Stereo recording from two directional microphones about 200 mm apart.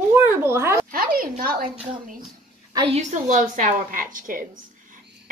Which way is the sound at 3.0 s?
40° right (ahead or behind).